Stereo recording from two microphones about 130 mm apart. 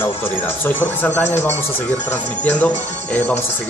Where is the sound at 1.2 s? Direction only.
60° left (ahead or behind).